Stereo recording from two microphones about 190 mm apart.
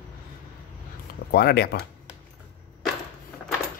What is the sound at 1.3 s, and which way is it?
Speech, 55° left (ahead or behind).